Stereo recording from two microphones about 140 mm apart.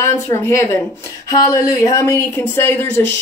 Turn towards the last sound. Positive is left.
turn(degrees=15)  # may be behind; listen again after turning